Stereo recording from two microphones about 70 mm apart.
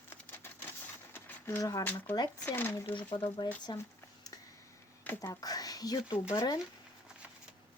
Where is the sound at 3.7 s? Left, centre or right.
Left.